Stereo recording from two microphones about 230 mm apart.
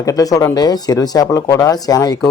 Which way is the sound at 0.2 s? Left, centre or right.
Centre.